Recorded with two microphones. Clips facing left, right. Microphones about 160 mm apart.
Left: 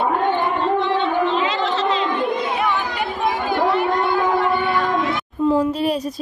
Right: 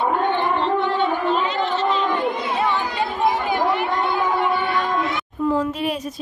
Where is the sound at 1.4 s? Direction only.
90° left.